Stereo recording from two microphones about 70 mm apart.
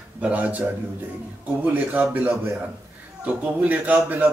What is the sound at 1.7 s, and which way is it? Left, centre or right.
A man's voice, right.